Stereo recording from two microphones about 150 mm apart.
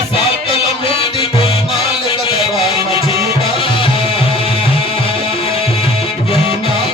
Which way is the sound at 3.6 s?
40° left (ahead or behind).